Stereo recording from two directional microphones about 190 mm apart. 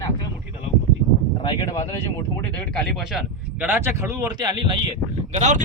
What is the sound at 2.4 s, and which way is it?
Speech, 5° left (ahead or behind).